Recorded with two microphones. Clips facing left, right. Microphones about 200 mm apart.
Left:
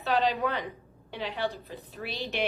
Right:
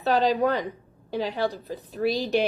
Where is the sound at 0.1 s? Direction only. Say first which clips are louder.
Right 5 dB; 40° right (ahead or behind).